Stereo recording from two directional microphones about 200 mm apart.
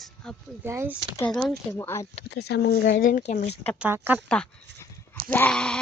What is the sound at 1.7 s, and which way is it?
Speech, 15° left (ahead or behind).